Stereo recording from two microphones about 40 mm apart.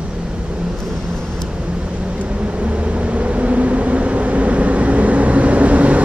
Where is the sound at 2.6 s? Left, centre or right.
Right.